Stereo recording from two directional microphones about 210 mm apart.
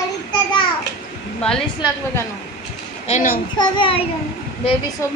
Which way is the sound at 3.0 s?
40° left (ahead or behind).